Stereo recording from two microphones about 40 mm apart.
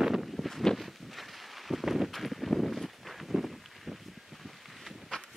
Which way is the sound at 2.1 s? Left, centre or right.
Centre.